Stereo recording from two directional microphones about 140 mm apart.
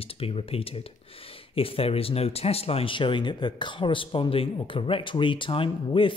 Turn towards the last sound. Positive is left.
turn(degrees=40)  # may be behind; listen again after turning